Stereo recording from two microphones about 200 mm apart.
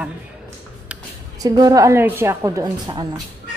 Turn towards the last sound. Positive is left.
turn(degrees=-20)  # may be behind; listen again after turning